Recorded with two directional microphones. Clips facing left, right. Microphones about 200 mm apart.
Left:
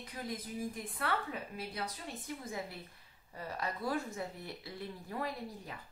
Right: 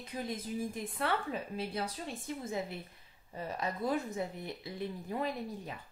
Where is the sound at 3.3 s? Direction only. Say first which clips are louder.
Right 3 dB; 20° right (ahead or behind).